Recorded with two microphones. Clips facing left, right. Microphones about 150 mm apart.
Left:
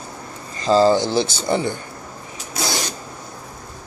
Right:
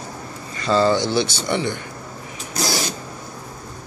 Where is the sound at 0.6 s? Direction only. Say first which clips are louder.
Left 3 dB; 35° left (ahead or behind).